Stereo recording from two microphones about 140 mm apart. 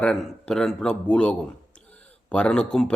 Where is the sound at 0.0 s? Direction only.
5° left (ahead or behind).